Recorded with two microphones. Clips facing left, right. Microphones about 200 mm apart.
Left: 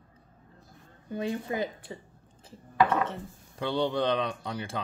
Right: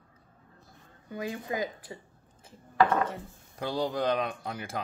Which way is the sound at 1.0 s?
30° left (ahead or behind).